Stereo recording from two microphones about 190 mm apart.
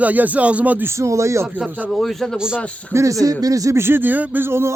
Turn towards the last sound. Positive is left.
turn(degrees=-10)  # may be behind; listen again after turning